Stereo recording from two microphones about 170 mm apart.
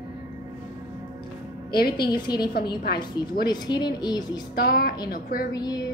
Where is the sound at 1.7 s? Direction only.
65° left (ahead or behind).